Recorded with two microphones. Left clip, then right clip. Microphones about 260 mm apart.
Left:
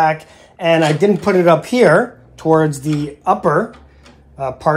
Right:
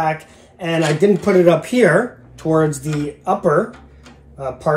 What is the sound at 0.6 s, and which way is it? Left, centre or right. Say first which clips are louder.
Speech: left 4 dB; left.